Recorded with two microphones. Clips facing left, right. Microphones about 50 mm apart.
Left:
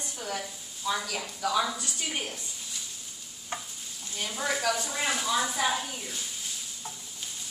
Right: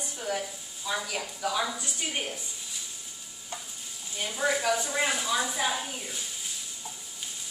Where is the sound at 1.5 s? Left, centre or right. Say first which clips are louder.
Left 2 dB; centre.